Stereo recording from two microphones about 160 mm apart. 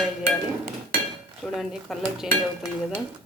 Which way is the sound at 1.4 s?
Centre (ahead or behind).